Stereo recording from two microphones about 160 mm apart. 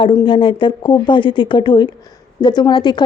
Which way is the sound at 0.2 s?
30° left (ahead or behind).